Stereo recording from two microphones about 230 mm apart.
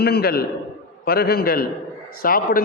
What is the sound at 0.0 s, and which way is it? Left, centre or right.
A man's voice, left.